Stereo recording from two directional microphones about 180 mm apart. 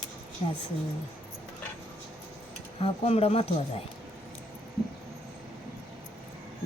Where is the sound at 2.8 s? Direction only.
35° left (ahead or behind).